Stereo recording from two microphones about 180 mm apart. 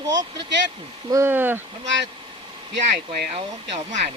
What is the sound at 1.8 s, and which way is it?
Speech, 85° right.